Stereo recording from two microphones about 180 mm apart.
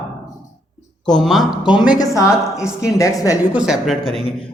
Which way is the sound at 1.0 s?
Centre (ahead or behind).